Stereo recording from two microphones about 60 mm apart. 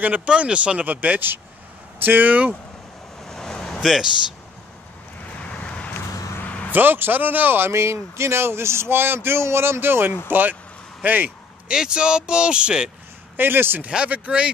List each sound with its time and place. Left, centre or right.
0.0 s speech: right
0.3 s a man's voice: centre
3.3 s vehicle: centre
3.8 s speech: centre
5.4 s vehicle: centre
6.7 s a man's voice: right
11.6 s speech: centre
13.4 s a man's voice: right
13.8 s speech: right